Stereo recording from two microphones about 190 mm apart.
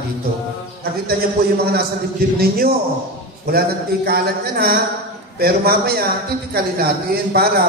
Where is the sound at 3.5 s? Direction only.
55° right (ahead or behind).